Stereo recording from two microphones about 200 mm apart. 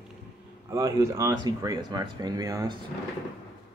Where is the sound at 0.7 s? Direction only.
15° right (ahead or behind).